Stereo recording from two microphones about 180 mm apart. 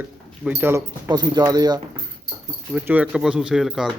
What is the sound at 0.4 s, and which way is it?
Speech, 10° right (ahead or behind).